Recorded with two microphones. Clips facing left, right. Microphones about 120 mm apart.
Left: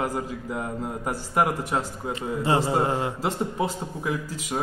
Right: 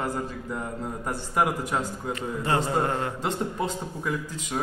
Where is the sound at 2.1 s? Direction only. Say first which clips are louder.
Left 3 dB; 25° left (ahead or behind).